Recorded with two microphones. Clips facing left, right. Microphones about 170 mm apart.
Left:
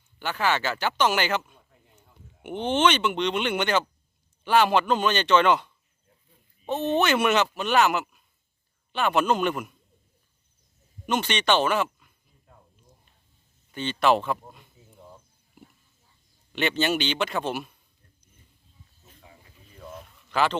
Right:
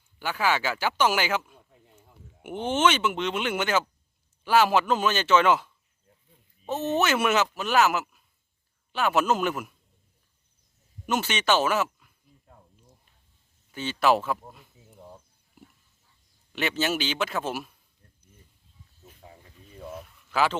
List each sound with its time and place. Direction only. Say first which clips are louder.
0.2 s speech: even; 10° right (ahead or behind)
11.0 s speech: left 1 dB; 5° right (ahead or behind)
13.7 s speech: left 1 dB; 5° right (ahead or behind)
16.5 s speech: left 2 dB; 5° right (ahead or behind)
19.8 s a sound: right 3 dB; 5° right (ahead or behind)